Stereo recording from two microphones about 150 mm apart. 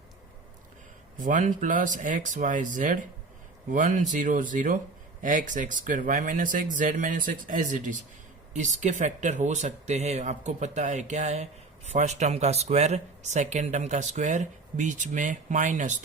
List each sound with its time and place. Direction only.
1.2 s speech: 60° right (ahead or behind)